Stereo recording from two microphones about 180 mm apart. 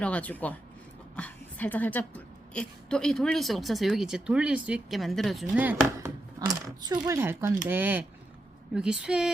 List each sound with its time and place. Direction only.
0.0 s a woman's voice: 10° left (ahead or behind); by 6.1 s 10° right (ahead or behind)
6.4 s a woman's voice: 20° right (ahead or behind); by 9.3 s 5° right (ahead or behind)